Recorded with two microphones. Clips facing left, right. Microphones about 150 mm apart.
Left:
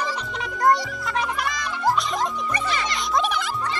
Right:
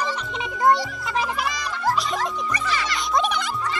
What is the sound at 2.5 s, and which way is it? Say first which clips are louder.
Music: even; 25° left (ahead or behind).